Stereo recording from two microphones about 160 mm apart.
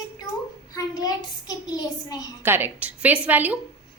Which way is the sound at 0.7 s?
25° left (ahead or behind).